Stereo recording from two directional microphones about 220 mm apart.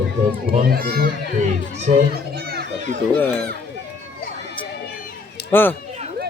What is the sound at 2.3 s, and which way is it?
Children playing, 45° right (ahead or behind).